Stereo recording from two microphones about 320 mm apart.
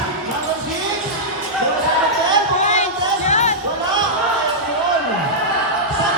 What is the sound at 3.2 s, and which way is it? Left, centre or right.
Basketball bounce, left.